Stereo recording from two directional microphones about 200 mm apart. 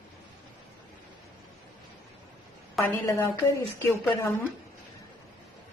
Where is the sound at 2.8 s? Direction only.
Centre (ahead or behind).